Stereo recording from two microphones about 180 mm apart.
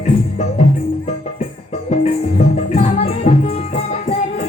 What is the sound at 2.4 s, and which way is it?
Music, 40° left (ahead or behind).